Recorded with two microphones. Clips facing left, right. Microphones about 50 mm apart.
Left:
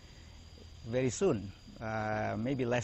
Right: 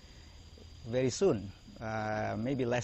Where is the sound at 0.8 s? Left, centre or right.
Centre.